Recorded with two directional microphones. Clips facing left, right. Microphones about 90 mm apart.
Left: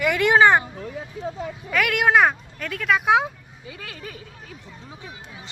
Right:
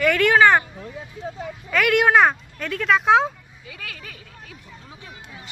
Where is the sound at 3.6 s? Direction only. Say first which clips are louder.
Left 1 dB; 25° left (ahead or behind).